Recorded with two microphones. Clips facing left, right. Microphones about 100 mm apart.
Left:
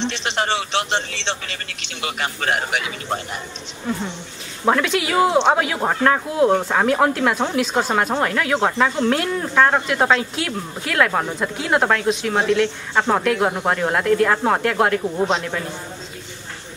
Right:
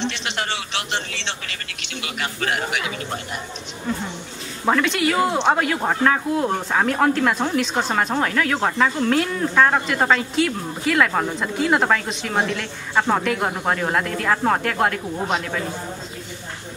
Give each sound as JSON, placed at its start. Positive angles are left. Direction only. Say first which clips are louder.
{"t": 0.0, "sound": "a man's voice", "louder": "left 3 dB", "side_deg": 30}
{"t": 4.6, "sound": "speech", "louder": "left 1 dB", "side_deg": 5}